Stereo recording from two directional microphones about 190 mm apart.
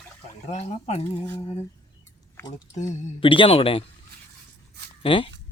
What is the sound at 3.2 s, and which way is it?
Speech, 25° left (ahead or behind).